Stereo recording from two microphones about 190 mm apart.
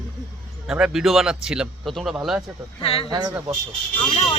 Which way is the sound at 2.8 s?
30° left (ahead or behind).